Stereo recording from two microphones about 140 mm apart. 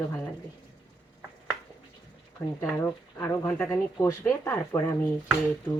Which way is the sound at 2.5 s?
15° left (ahead or behind).